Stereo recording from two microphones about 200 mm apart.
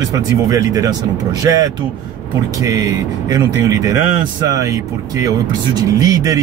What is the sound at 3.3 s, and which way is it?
Speech, 20° right (ahead or behind).